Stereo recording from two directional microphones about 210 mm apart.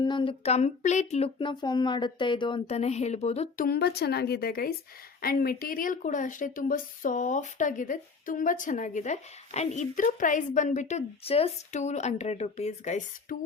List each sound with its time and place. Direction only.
0.0 s speech: 20° left (ahead or behind)
3.7 s a woman's voice: 50° left (ahead or behind); by 13.3 s 35° left (ahead or behind)